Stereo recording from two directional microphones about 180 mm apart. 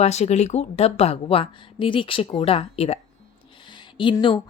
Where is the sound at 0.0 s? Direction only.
35° left (ahead or behind).